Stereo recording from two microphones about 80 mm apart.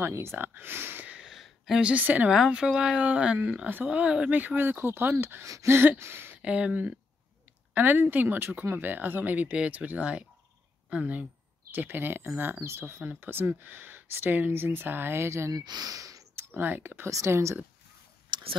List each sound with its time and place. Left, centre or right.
0.0 s speech: right; by 1.3 s centre
1.3 s a woman's voice: centre
2.3 s speech: centre; by 5.8 s right
5.8 s a sound: right
6.4 s speech: centre; by 15.5 s right
15.5 s speech: right
16.3 s speech: right
17.1 s speech: right
18.3 s a sound: right